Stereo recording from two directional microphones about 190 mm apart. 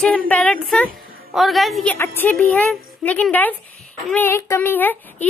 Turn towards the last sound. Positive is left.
turn(degrees=10)  # may be behind; listen again after turning